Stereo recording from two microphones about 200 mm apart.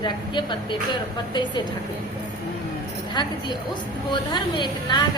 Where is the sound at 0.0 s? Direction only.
25° left (ahead or behind).